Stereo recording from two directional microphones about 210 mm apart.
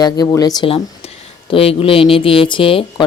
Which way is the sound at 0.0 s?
20° left (ahead or behind).